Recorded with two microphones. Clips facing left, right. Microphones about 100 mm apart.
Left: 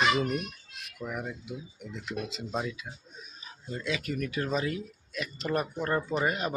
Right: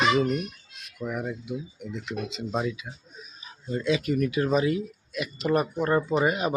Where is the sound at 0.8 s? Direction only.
Centre (ahead or behind).